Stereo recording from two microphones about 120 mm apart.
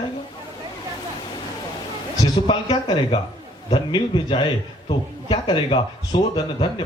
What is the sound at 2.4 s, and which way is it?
Speech, 45° left (ahead or behind).